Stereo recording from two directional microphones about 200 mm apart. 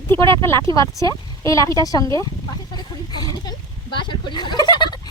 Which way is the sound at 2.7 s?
20° left (ahead or behind).